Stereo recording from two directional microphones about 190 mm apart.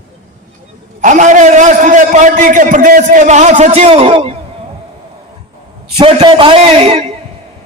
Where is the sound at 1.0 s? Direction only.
40° right (ahead or behind).